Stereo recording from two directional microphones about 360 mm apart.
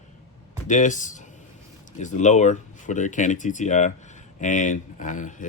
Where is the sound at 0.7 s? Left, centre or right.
Left.